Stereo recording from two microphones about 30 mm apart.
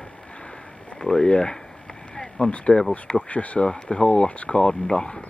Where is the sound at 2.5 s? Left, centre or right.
Left.